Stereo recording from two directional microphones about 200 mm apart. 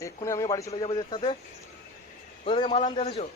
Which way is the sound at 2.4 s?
25° left (ahead or behind).